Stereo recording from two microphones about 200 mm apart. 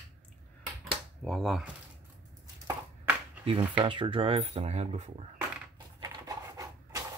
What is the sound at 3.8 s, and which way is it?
Speech, 25° right (ahead or behind).